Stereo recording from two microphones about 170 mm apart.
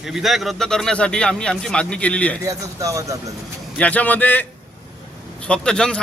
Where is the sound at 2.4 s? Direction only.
20° right (ahead or behind).